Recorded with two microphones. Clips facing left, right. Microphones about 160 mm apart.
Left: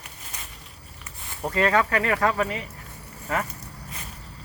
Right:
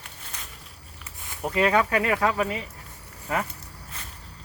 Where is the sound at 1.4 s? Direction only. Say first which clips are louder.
Even; 10° right (ahead or behind).